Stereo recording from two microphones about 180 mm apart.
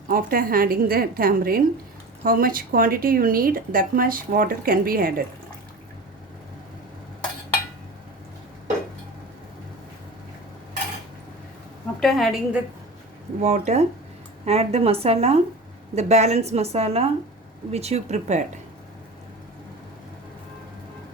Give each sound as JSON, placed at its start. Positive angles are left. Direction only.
{"t": 0.1, "sound": "speech", "side_deg": -50}
{"t": 11.9, "sound": "a woman's voice", "side_deg": 0}
{"t": 13.4, "sound": "a woman's voice", "side_deg": -40}